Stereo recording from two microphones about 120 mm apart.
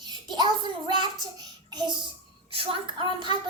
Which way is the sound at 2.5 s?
45° right (ahead or behind).